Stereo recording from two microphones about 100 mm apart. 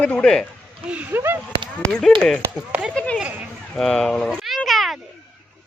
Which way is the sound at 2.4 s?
15° right (ahead or behind).